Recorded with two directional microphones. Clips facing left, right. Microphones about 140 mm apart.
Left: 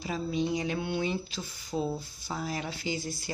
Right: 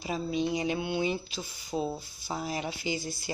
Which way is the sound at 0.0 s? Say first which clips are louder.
Right 1 dB; 15° right (ahead or behind).